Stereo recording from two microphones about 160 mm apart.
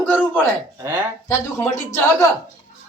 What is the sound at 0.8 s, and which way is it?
Speech, 15° right (ahead or behind).